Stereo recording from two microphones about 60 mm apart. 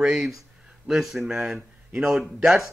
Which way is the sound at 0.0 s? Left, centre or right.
Centre.